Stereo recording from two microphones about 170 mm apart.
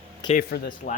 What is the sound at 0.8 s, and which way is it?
Speech, 55° left (ahead or behind).